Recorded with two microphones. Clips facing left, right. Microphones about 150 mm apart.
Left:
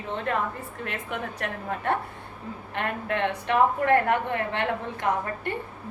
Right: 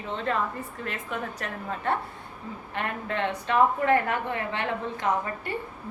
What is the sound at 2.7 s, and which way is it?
A woman's voice, 60° left (ahead or behind).